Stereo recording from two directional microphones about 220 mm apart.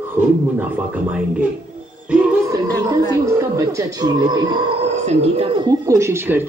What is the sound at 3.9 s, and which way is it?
Speech, 20° right (ahead or behind).